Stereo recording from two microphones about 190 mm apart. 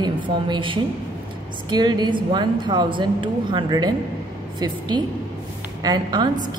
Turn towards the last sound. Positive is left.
turn(degrees=-20)  # may be behind; listen again after turning